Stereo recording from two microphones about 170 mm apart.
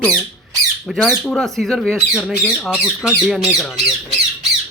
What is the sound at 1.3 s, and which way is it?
Speech, centre (ahead or behind).